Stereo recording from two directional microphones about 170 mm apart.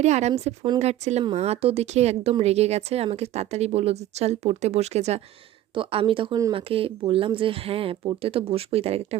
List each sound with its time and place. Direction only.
0.0 s speech: 40° right (ahead or behind)